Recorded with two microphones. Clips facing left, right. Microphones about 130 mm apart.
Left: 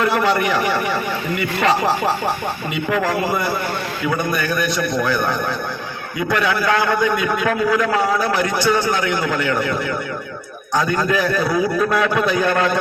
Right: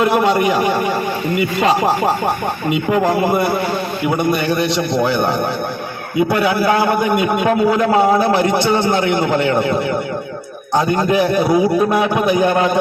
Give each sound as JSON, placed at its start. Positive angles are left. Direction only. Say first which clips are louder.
{"t": 0.0, "sound": "a man's voice", "louder": "right 4 dB", "side_deg": -20}